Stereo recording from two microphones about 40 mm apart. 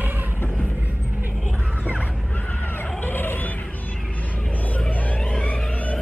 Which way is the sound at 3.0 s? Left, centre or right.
Left.